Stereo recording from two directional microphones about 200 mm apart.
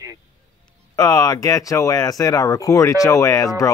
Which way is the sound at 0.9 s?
20° left (ahead or behind).